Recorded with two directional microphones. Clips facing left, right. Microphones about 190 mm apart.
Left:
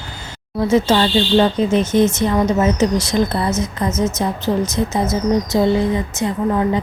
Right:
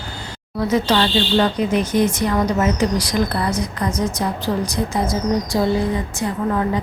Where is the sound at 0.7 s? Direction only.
25° left (ahead or behind).